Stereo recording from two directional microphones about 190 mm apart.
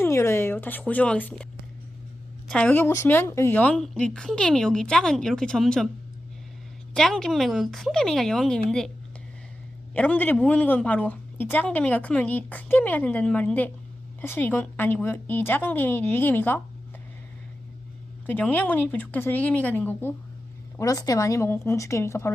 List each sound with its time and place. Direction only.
0.0 s speech: 15° left (ahead or behind)
2.5 s a woman's voice: 5° left (ahead or behind)
6.9 s a woman's voice: centre (ahead or behind)
9.9 s a woman's voice: 10° left (ahead or behind)
18.3 s a woman's voice: 10° left (ahead or behind)